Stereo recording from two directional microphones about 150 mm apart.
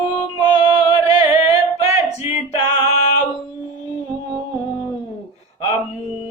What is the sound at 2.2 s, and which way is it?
Music, 40° left (ahead or behind).